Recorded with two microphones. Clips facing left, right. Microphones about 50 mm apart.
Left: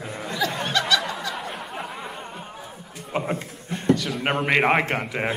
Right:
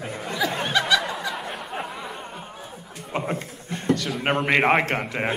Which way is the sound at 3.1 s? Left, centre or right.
Centre.